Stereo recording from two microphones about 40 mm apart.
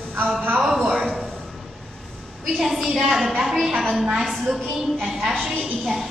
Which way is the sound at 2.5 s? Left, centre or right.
Centre.